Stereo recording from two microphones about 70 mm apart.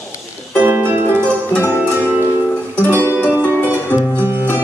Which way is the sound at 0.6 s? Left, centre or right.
Right.